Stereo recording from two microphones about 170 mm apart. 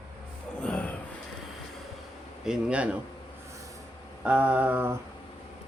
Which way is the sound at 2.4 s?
5° right (ahead or behind).